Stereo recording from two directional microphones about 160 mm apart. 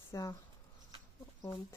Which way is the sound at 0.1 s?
20° left (ahead or behind).